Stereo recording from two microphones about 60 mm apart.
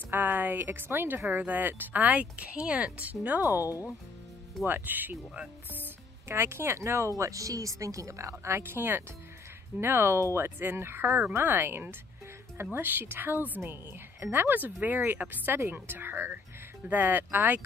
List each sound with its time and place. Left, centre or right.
0.1 s a woman's voice: right
3.6 s speech: left
4.6 s a woman's voice: right